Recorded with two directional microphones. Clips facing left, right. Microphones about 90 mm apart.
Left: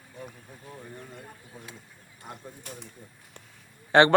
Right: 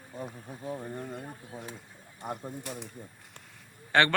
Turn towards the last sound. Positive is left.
turn(degrees=20)  # may be behind; listen again after turning